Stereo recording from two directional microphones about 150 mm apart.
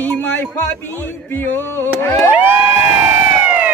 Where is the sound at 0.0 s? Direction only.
15° left (ahead or behind).